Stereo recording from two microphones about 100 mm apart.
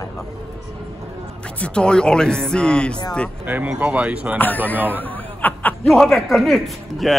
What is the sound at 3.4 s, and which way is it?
Speech, 15° right (ahead or behind).